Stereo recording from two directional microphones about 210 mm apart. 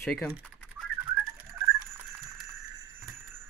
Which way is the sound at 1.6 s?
10° right (ahead or behind).